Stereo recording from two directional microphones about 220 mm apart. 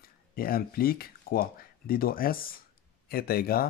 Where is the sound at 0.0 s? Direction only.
40° left (ahead or behind).